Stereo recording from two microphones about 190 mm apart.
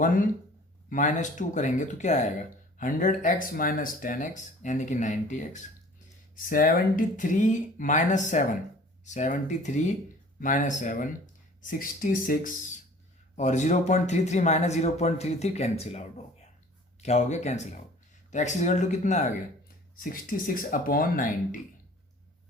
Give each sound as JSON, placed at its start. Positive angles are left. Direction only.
{"t": 0.0, "sound": "speech", "side_deg": 45}